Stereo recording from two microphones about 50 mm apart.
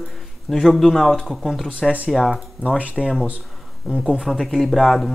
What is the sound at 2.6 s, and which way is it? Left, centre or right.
Speech, right.